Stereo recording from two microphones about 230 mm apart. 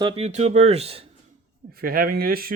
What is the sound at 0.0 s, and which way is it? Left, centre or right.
Speech, right.